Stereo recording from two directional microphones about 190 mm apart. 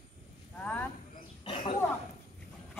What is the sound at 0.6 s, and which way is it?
Speech, 10° left (ahead or behind).